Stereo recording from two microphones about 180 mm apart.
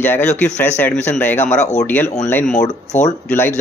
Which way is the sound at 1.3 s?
40° left (ahead or behind).